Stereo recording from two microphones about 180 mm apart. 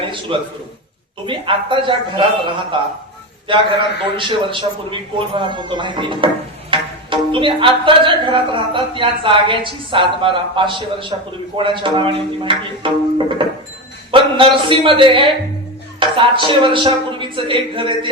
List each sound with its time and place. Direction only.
0.3 s a man's voice: 30° right (ahead or behind)